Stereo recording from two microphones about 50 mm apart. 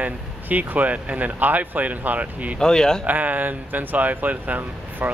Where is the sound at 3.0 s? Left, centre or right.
Right.